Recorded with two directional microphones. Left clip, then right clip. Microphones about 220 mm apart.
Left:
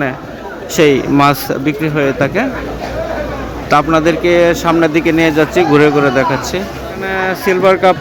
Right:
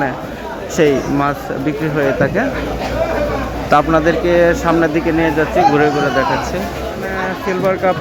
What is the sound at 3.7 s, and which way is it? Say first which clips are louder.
Speech: left 2 dB; 5° left (ahead or behind).